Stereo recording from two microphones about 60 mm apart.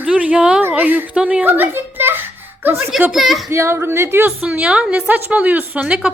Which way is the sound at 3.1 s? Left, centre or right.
Centre.